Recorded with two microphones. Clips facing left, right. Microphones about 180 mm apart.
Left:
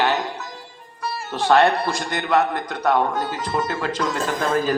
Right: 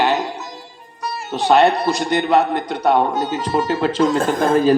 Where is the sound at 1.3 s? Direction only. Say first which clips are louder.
Right 3 dB; 20° right (ahead or behind).